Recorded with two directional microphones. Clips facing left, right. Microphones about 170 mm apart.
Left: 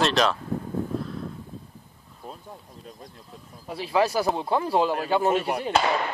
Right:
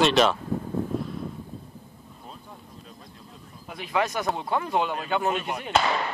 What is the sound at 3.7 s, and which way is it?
Speech, 30° left (ahead or behind).